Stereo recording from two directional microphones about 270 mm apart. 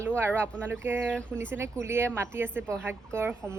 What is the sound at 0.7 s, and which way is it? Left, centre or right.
A woman's voice, centre.